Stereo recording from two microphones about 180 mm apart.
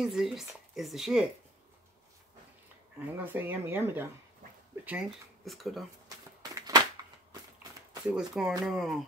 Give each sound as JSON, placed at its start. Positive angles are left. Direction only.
{"t": 0.0, "sound": "speech", "side_deg": 0}
{"t": 3.2, "sound": "speech", "side_deg": -10}
{"t": 6.0, "sound": "a sound", "side_deg": -20}
{"t": 8.1, "sound": "speech", "side_deg": 0}